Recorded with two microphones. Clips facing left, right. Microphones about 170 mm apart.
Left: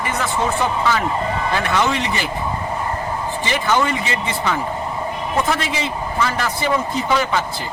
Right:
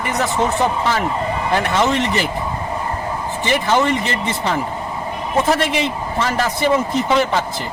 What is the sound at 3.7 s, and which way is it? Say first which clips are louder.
Speech: right 1 dB; 30° right (ahead or behind).